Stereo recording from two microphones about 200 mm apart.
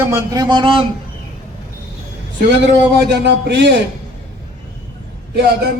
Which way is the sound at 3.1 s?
60° right (ahead or behind).